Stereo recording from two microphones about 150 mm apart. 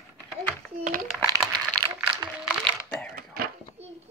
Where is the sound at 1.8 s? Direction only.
25° right (ahead or behind).